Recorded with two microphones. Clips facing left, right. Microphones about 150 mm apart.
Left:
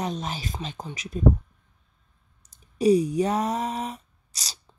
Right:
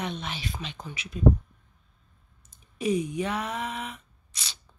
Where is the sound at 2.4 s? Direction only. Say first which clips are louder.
Left 8 dB; 40° left (ahead or behind).